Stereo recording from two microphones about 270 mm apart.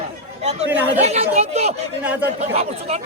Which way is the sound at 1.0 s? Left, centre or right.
Right.